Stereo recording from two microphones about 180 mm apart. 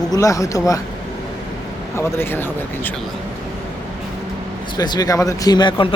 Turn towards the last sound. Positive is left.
turn(degrees=25)  # may be behind; listen again after turning